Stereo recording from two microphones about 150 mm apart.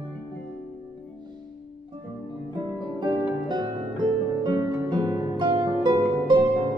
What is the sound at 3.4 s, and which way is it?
Harp, 30° right (ahead or behind).